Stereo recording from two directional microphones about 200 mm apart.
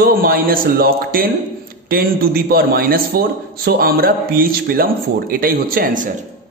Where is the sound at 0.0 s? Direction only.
45° right (ahead or behind).